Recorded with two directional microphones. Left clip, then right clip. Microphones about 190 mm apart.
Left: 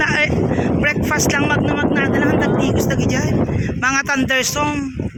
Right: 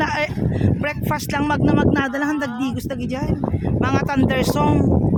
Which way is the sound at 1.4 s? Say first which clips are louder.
Left 1 dB; 25° right (ahead or behind).